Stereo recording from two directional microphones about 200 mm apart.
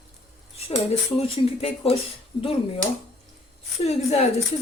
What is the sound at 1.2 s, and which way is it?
Speech, 30° left (ahead or behind).